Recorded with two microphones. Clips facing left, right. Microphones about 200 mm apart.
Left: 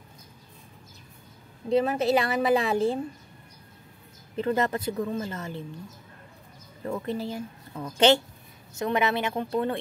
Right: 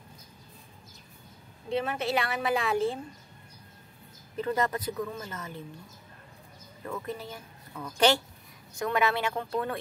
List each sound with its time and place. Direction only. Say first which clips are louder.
1.7 s a woman's voice: left 7 dB; 35° left (ahead or behind)
4.4 s speech: left 3 dB; 30° left (ahead or behind)
6.9 s speech: left 6 dB; 30° left (ahead or behind)